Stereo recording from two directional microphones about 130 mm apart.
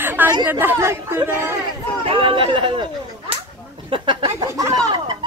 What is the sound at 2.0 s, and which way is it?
Speech, 40° right (ahead or behind).